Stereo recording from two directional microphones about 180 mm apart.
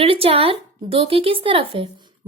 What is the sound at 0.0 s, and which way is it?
Speech, 30° right (ahead or behind).